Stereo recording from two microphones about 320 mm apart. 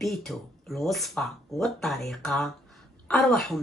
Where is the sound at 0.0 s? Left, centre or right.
Centre.